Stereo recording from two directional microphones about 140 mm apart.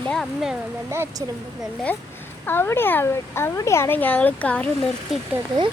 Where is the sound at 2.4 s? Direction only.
15° left (ahead or behind).